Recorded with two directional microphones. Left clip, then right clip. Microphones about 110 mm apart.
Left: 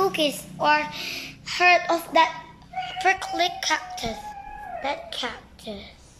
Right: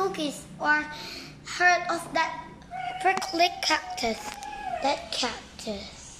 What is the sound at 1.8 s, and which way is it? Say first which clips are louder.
Speech: left 7 dB; 25° left (ahead or behind).